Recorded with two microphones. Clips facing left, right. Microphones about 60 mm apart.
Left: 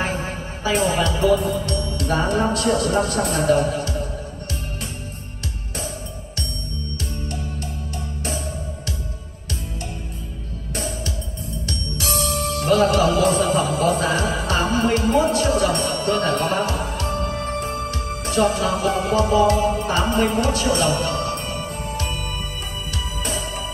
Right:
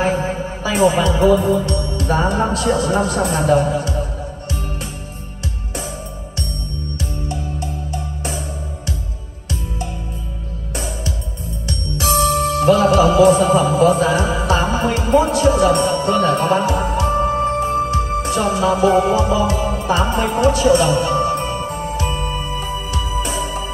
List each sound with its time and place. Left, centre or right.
0.0 s speech: right
7.0 s music: right
10.7 s music: right